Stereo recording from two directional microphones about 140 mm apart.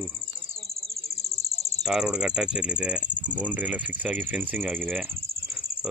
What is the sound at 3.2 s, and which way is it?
Cricket, 10° right (ahead or behind).